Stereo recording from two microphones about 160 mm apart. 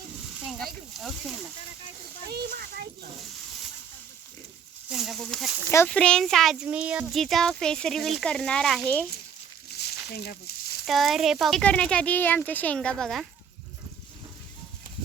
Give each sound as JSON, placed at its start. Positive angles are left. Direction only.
{"t": 0.4, "sound": "speech", "side_deg": 0}
{"t": 2.3, "sound": "a child's voice", "side_deg": -90}
{"t": 4.9, "sound": "speech", "side_deg": 0}
{"t": 9.7, "sound": "a sound", "side_deg": 90}
{"t": 10.8, "sound": "speech", "side_deg": 0}